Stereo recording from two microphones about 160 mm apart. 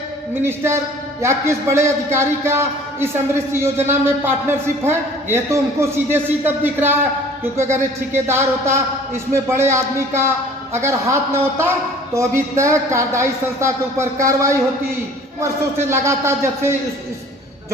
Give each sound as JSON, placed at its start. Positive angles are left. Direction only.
{"t": 0.4, "sound": "a man's voice", "side_deg": -15}